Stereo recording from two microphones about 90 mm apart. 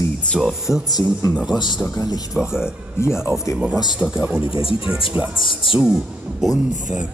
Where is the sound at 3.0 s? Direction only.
30° left (ahead or behind).